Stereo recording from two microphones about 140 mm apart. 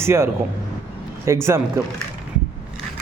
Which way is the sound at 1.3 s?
20° right (ahead or behind).